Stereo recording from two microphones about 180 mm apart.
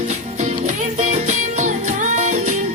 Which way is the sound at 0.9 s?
40° right (ahead or behind).